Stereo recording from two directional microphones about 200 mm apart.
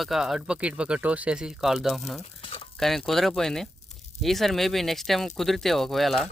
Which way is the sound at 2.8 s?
Centre (ahead or behind).